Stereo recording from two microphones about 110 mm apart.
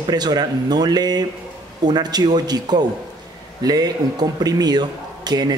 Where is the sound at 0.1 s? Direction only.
40° right (ahead or behind).